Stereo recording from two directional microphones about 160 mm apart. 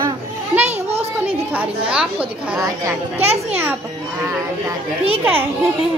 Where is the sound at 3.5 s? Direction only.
10° right (ahead or behind).